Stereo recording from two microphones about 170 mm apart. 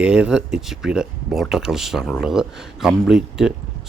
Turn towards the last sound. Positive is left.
turn(degrees=-5)  # may be behind; listen again after turning